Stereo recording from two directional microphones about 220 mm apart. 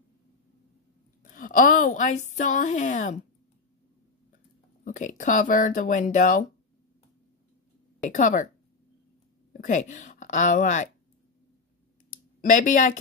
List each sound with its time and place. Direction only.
1.2 s a woman's voice: 40° left (ahead or behind)
4.8 s a woman's voice: 35° left (ahead or behind)
8.0 s a woman's voice: 35° left (ahead or behind)
9.5 s a woman's voice: 35° left (ahead or behind)
12.1 s a sound: 35° left (ahead or behind)